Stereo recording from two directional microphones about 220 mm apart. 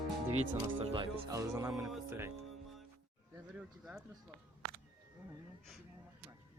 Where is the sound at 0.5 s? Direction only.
20° right (ahead or behind).